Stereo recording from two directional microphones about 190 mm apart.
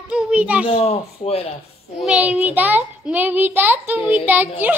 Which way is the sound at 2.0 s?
5° right (ahead or behind).